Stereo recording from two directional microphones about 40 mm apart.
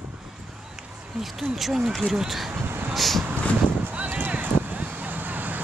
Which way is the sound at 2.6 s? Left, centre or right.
Right.